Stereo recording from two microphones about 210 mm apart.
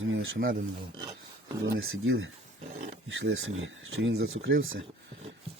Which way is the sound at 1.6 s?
65° right (ahead or behind).